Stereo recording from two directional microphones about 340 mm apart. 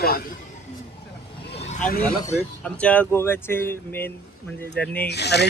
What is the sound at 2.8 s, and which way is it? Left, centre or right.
Speech, centre.